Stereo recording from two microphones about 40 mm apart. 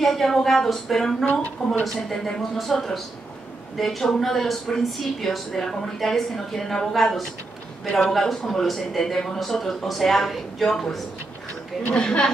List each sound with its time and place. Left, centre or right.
0.0 s a woman's voice: centre
2.5 s a woman's voice: centre
11.9 s a woman's voice: left